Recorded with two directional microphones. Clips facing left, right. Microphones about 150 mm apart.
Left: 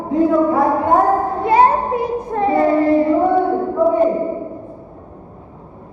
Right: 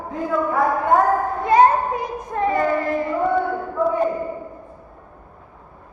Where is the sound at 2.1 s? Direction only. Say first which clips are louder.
Left 4 dB; 20° left (ahead or behind).